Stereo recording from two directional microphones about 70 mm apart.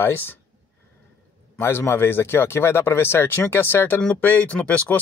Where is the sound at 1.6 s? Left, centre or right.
Left.